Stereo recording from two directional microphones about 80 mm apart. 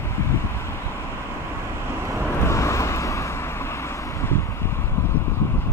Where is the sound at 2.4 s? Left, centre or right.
Left.